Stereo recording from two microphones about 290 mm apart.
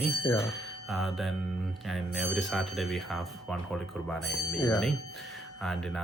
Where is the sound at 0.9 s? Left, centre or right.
Centre.